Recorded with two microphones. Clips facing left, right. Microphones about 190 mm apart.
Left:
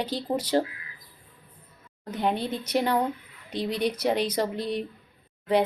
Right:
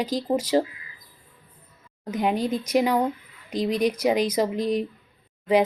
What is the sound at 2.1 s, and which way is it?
Speech, 10° right (ahead or behind).